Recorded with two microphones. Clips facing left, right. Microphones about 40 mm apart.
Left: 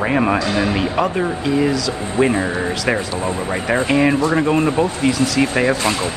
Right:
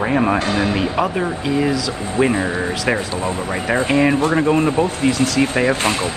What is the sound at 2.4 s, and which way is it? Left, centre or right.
Speech, left.